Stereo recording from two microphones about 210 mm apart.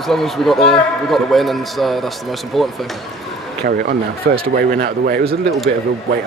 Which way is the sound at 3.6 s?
45° right (ahead or behind).